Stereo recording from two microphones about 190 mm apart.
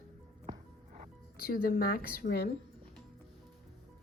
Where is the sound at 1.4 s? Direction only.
50° left (ahead or behind).